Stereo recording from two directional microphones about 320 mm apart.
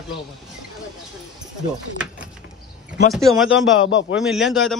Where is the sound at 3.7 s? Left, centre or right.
Left.